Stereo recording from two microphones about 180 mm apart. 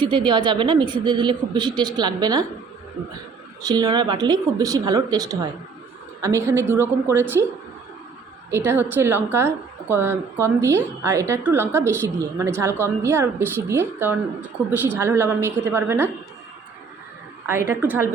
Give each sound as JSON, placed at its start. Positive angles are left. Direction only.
{"t": 0.0, "sound": "speech", "side_deg": -25}
{"t": 3.6, "sound": "a woman's voice", "side_deg": -20}
{"t": 8.4, "sound": "a woman's voice", "side_deg": -15}
{"t": 17.4, "sound": "a woman's voice", "side_deg": -15}